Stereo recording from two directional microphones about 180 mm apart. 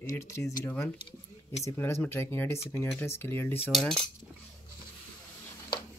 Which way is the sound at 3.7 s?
Centre (ahead or behind).